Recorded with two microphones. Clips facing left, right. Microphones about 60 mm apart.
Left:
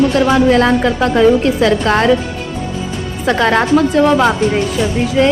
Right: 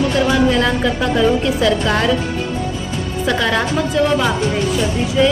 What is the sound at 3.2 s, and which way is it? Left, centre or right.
Speech, left.